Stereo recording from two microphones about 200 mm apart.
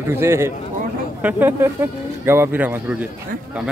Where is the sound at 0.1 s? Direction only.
15° right (ahead or behind).